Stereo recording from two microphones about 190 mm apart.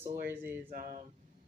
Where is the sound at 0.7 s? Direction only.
45° right (ahead or behind).